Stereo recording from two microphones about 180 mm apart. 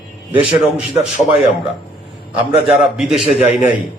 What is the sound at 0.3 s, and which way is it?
Speech, 10° right (ahead or behind).